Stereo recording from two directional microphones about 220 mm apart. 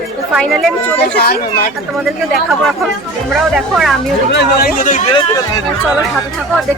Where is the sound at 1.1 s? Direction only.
45° left (ahead or behind).